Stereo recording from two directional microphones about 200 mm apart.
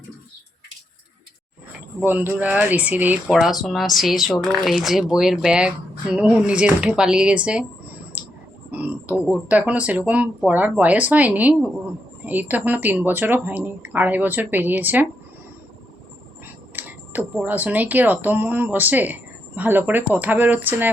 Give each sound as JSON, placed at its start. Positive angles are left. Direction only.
{"t": 2.0, "sound": "speech", "side_deg": -10}
{"t": 8.2, "sound": "a sound", "side_deg": -10}
{"t": 8.7, "sound": "speech", "side_deg": -10}
{"t": 16.7, "sound": "speech", "side_deg": -10}